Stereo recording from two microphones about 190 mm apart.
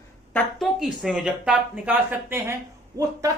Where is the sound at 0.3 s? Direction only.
Centre (ahead or behind).